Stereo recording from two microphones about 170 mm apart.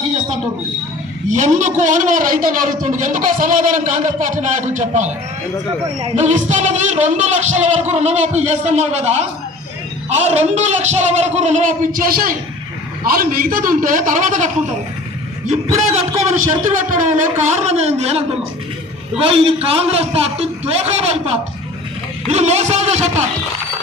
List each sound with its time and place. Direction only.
1.3 s speech: 45° right (ahead or behind)
6.1 s speech: 45° right (ahead or behind)
10.2 s a man's voice: 40° right (ahead or behind)
19.2 s a man's voice: 35° right (ahead or behind)